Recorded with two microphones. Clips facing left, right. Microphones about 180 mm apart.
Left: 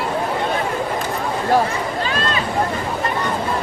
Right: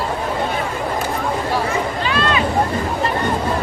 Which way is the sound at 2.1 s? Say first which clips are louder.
Right 3 dB; 40° left (ahead or behind).